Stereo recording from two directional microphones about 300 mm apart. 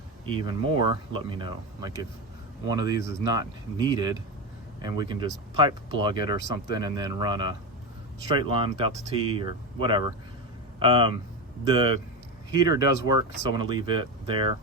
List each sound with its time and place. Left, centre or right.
0.3 s speech: centre